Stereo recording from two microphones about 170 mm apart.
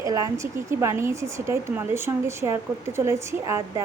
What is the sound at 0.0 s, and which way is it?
Speech, 20° right (ahead or behind).